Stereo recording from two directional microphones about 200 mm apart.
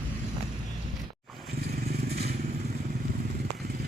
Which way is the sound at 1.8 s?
50° right (ahead or behind).